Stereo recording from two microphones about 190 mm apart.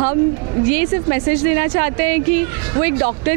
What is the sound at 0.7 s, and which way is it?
Speech, 15° right (ahead or behind).